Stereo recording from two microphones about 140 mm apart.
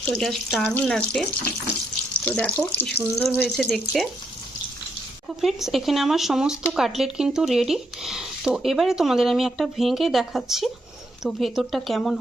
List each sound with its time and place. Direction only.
0.0 s speech: 5° left (ahead or behind)
5.4 s speech: centre (ahead or behind)